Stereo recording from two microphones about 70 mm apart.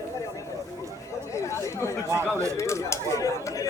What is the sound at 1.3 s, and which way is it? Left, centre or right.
Chatter, left.